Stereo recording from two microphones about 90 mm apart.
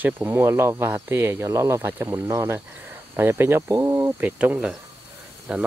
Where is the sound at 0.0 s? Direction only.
25° right (ahead or behind).